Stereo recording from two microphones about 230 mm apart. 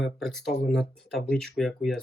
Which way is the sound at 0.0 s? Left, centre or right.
Centre.